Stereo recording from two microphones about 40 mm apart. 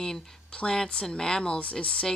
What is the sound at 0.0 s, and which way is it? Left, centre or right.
Speech, centre.